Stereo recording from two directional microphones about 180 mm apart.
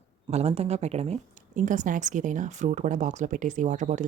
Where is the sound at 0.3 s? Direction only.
35° right (ahead or behind).